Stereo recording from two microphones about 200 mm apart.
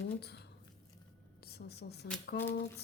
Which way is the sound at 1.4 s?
55° left (ahead or behind).